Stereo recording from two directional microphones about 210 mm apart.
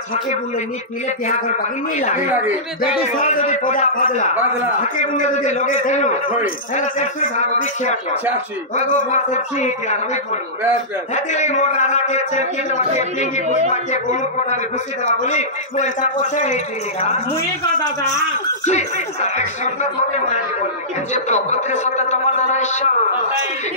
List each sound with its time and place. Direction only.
2.0 s a man's voice: 35° left (ahead or behind)
2.3 s speech: 5° right (ahead or behind)
3.3 s a man's voice: 35° left (ahead or behind)
11.1 s a man's voice: 35° left (ahead or behind)
15.2 s a man's voice: 35° left (ahead or behind)
18.7 s a man's voice: 35° left (ahead or behind)
21.1 s a man's voice: 35° left (ahead or behind)